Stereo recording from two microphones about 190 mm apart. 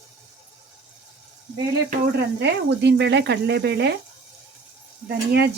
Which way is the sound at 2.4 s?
65° right (ahead or behind).